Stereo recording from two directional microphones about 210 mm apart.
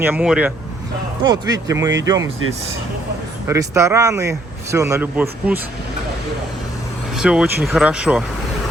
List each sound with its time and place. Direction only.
0.0 s speech: 5° right (ahead or behind)
1.5 s speech: 15° right (ahead or behind)
3.4 s speech: 15° right (ahead or behind)
7.2 s speech: 5° right (ahead or behind)